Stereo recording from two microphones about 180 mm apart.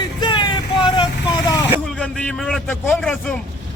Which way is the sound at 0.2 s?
25° left (ahead or behind).